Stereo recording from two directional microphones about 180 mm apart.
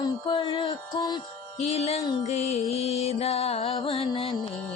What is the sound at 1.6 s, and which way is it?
Music, 35° left (ahead or behind).